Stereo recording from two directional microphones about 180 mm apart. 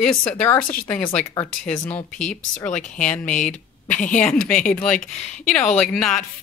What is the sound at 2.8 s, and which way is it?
A woman's voice, 45° left (ahead or behind).